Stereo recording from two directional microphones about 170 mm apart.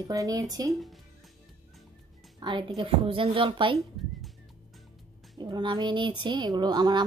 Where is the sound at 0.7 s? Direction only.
Centre (ahead or behind).